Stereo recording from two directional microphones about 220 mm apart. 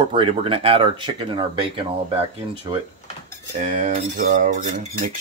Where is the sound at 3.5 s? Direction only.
35° right (ahead or behind).